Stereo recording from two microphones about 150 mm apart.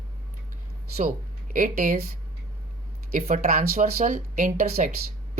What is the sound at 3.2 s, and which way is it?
Speech, 55° right (ahead or behind).